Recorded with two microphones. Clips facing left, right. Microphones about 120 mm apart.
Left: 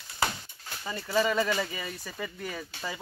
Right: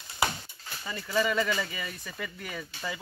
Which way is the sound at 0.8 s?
25° left (ahead or behind).